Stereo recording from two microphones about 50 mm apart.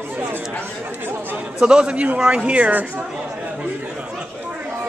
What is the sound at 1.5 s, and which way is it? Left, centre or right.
A man's voice, centre.